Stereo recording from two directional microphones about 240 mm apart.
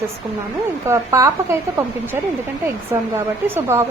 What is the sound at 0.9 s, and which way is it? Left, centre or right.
A woman's voice, centre.